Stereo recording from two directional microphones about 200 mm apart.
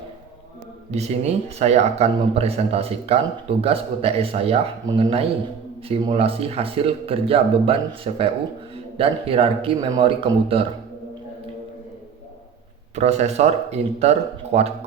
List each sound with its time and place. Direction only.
0.9 s speech: 35° right (ahead or behind)
13.0 s speech: 35° right (ahead or behind)